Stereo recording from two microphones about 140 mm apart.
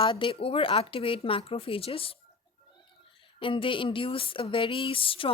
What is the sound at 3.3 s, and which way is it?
Speech, 35° left (ahead or behind).